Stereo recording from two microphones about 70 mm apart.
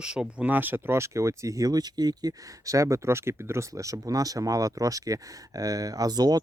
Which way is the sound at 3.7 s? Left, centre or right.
Right.